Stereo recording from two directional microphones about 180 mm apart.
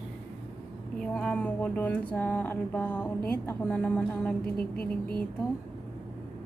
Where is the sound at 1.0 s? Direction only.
5° left (ahead or behind).